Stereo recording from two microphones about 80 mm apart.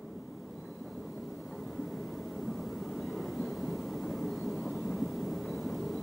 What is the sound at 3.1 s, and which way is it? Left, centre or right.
Vehicle, centre.